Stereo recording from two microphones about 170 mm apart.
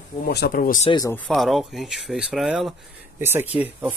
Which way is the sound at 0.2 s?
65° left (ahead or behind).